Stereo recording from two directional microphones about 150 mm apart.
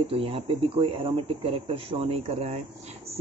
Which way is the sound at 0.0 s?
40° right (ahead or behind).